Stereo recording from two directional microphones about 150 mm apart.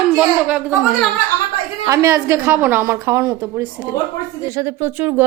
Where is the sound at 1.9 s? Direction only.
20° right (ahead or behind).